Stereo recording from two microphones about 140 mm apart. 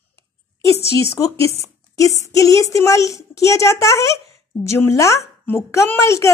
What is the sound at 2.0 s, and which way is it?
Speech, 20° left (ahead or behind).